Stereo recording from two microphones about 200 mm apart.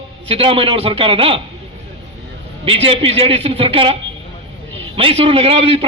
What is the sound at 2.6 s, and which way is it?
A man's voice, 30° right (ahead or behind).